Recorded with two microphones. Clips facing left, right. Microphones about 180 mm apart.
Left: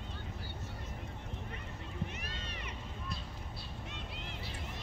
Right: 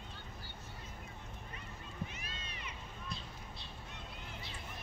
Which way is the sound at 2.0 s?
65° left (ahead or behind).